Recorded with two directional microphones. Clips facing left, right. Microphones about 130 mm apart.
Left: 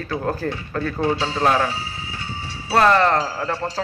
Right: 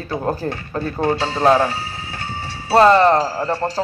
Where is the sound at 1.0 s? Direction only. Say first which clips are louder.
Right 3 dB; 50° right (ahead or behind).